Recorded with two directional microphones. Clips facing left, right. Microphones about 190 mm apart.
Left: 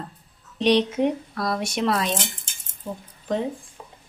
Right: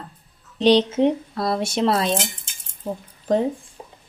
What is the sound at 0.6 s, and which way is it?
Speech, 30° right (ahead or behind).